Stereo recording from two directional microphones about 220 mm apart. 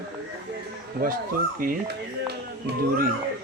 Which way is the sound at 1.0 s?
40° right (ahead or behind).